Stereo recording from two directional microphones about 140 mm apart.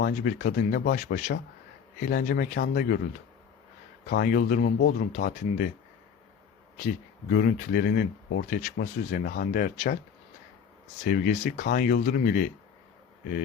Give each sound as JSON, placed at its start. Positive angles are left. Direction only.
{"t": 0.0, "sound": "speech", "side_deg": 85}
{"t": 2.0, "sound": "speech", "side_deg": 85}
{"t": 4.2, "sound": "speech", "side_deg": 90}
{"t": 6.7, "sound": "speech", "side_deg": 85}
{"t": 11.0, "sound": "speech", "side_deg": 75}